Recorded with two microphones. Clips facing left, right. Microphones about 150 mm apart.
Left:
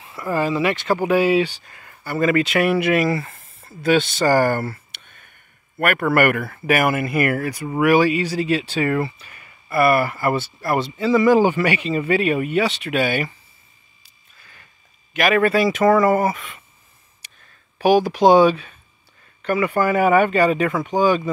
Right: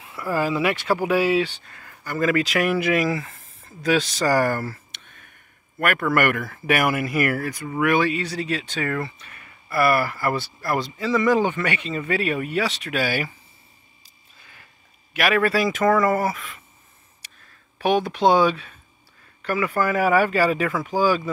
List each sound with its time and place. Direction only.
0.0 s speech: 5° right (ahead or behind)
4.5 s speech: 70° left (ahead or behind)
6.0 s speech: 5° left (ahead or behind)
15.1 s speech: centre (ahead or behind)
17.7 s speech: 5° left (ahead or behind)